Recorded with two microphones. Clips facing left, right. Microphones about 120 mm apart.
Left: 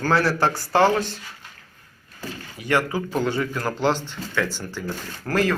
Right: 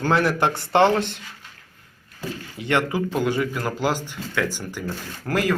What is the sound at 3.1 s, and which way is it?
Speech, 10° right (ahead or behind).